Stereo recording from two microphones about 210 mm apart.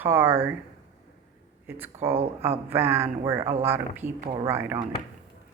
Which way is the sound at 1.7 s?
10° right (ahead or behind).